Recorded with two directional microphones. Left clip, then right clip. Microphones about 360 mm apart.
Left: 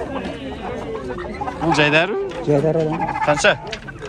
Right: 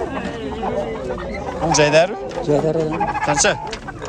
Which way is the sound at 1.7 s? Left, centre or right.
Centre.